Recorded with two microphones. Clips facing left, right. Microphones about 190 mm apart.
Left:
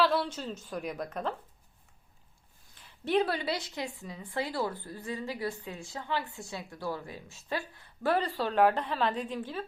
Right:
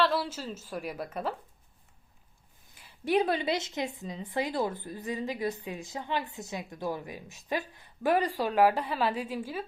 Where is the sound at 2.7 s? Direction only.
10° right (ahead or behind).